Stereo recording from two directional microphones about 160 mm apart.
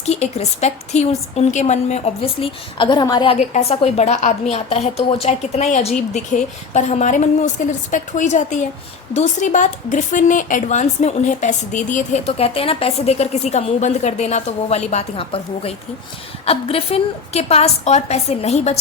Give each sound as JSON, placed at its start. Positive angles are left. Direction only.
{"t": 0.0, "sound": "a woman's voice", "side_deg": 40}
{"t": 3.3, "sound": "a woman's voice", "side_deg": 45}